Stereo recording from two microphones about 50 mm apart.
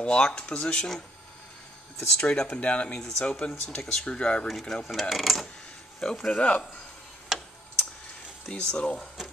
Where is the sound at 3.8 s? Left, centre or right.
Centre.